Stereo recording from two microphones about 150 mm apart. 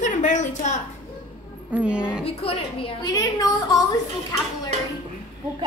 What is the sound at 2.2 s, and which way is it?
A woman's voice, 40° left (ahead or behind).